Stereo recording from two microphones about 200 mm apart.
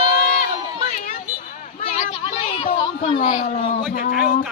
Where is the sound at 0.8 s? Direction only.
40° left (ahead or behind).